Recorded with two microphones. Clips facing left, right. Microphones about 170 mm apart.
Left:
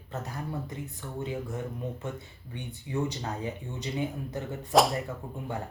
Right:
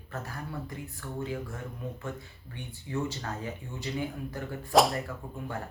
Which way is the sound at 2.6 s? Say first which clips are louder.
Left 2 dB; 20° left (ahead or behind).